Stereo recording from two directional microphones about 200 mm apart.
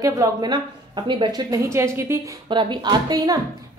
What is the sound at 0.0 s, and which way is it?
A woman's voice, 20° right (ahead or behind).